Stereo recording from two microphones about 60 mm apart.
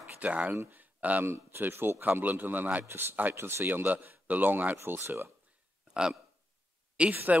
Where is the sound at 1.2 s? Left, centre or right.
Right.